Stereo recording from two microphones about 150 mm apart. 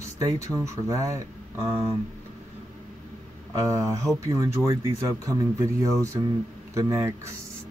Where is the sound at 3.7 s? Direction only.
20° right (ahead or behind).